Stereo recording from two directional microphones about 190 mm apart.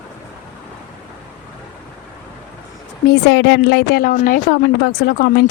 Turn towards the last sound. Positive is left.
turn(degrees=55)  # may be behind; listen again after turning